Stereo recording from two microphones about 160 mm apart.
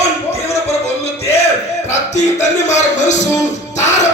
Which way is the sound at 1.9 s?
45° left (ahead or behind).